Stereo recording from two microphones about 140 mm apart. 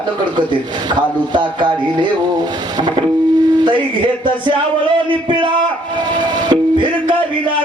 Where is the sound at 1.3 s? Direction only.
35° right (ahead or behind).